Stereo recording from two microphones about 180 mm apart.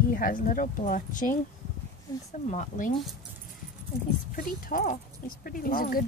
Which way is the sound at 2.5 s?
40° left (ahead or behind).